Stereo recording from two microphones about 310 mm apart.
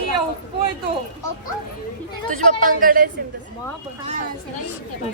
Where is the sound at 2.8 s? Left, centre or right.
Right.